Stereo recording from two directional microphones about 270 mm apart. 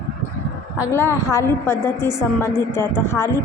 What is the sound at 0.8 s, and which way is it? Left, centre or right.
A woman's voice, centre.